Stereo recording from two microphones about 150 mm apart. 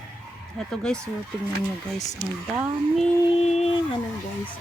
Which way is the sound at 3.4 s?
45° left (ahead or behind).